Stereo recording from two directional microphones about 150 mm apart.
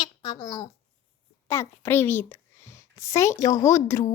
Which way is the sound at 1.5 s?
20° left (ahead or behind).